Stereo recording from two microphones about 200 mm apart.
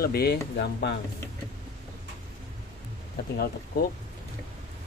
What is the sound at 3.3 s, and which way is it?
Speech, 50° left (ahead or behind).